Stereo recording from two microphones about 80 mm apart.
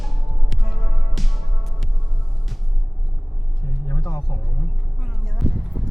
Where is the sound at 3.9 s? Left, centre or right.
Left.